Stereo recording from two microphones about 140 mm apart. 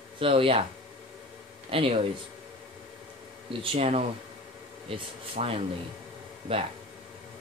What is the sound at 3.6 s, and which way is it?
Speech, 40° right (ahead or behind).